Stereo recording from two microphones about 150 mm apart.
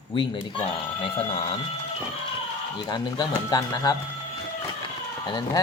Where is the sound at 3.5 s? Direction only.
25° left (ahead or behind).